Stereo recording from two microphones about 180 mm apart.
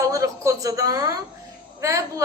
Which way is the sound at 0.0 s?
20° right (ahead or behind).